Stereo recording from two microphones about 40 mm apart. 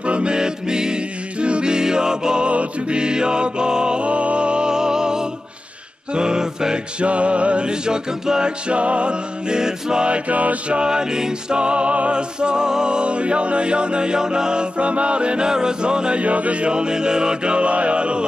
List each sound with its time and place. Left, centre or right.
0.0 s music: right
6.1 s a capella: centre
7.0 s music: right
9.6 s music: centre; by 10.8 s right
10.8 s music: centre
16.2 s music: right